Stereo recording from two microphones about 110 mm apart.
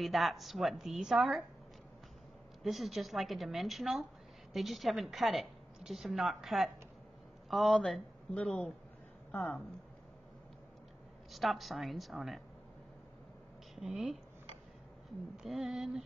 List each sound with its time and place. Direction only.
0.0 s a woman's voice: centre (ahead or behind)
2.6 s a woman's voice: centre (ahead or behind); by 9.6 s 20° left (ahead or behind)
11.3 s a woman's voice: centre (ahead or behind)
13.7 s a woman's voice: 5° right (ahead or behind)
15.4 s a woman's voice: centre (ahead or behind)